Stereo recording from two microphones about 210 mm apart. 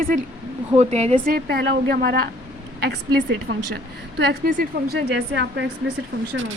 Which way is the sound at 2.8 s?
55° right (ahead or behind).